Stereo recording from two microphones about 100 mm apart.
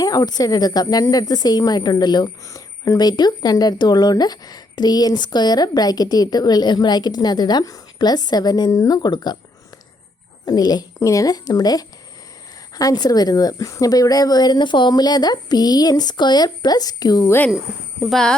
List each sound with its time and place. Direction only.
0.0 s speech: 40° left (ahead or behind)
10.4 s a woman's voice: 40° left (ahead or behind)
17.2 s speech: 20° left (ahead or behind)
18.1 s speech: 5° left (ahead or behind)